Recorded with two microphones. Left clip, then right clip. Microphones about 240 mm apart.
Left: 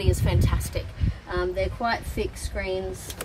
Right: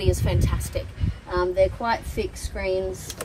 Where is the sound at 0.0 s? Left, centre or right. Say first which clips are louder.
Right 2 dB; centre.